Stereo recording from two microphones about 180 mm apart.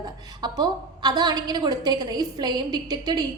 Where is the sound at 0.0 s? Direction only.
25° right (ahead or behind).